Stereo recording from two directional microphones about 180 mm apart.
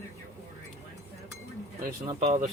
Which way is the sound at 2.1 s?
40° right (ahead or behind).